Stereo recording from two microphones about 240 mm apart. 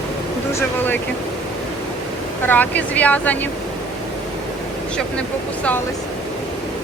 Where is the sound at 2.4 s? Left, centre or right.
Centre.